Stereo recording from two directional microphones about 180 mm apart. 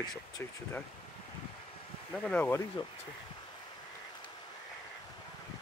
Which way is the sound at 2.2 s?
10° left (ahead or behind).